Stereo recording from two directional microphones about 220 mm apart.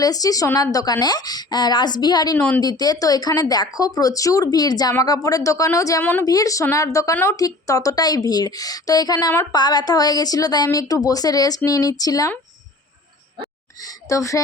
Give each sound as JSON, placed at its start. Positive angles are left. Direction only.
{"t": 0.0, "sound": "speech", "side_deg": 15}
{"t": 14.1, "sound": "speech", "side_deg": 15}